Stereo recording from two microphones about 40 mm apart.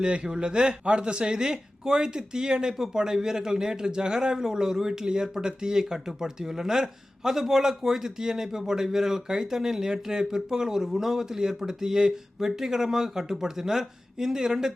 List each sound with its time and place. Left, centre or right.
0.0 s a man's voice: right